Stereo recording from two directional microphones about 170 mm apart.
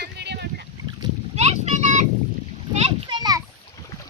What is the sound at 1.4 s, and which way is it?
Boat, 40° right (ahead or behind).